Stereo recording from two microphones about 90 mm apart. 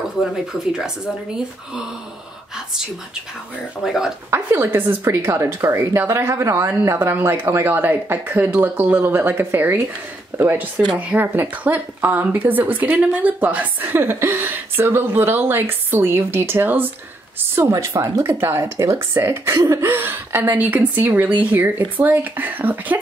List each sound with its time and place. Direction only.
3.8 s speech: 5° right (ahead or behind)
4.3 s a woman's voice: 25° right (ahead or behind)
17.6 s a woman's voice: 30° right (ahead or behind)